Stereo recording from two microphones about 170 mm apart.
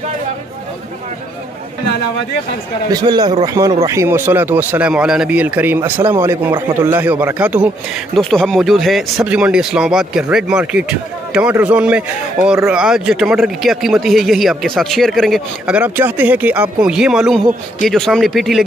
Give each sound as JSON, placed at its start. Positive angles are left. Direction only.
{"t": 2.9, "sound": "a man's voice", "side_deg": -25}
{"t": 8.2, "sound": "speech", "side_deg": 5}